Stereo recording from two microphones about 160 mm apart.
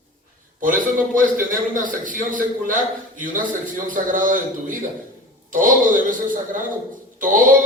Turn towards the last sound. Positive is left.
turn(degrees=-55)  # may be behind; listen again after turning